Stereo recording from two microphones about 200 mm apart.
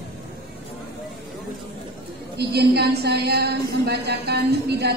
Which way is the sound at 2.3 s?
55° right (ahead or behind).